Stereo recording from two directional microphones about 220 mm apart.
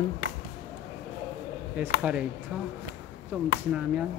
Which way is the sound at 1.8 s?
5° right (ahead or behind).